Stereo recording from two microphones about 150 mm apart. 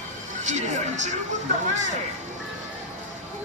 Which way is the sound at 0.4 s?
50° right (ahead or behind).